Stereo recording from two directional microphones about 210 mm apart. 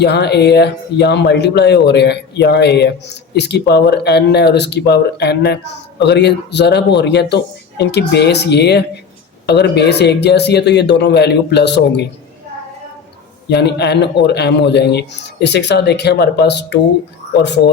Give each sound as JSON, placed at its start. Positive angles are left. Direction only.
{"t": 0.0, "sound": "speech", "side_deg": 50}
{"t": 13.5, "sound": "speech", "side_deg": 55}